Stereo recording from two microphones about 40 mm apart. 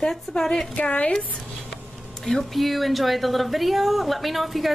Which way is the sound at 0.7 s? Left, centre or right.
Left.